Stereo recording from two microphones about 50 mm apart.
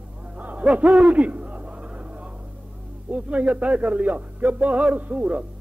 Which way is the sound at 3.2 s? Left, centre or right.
Right.